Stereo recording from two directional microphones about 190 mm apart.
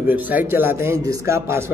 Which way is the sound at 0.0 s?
10° right (ahead or behind).